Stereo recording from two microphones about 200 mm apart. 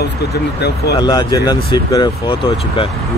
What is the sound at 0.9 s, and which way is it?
Speech, 20° left (ahead or behind).